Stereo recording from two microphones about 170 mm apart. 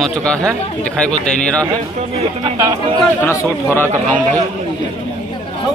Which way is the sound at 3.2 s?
15° left (ahead or behind).